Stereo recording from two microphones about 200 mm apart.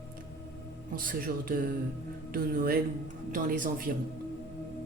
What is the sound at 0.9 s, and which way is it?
A woman's voice, 45° right (ahead or behind).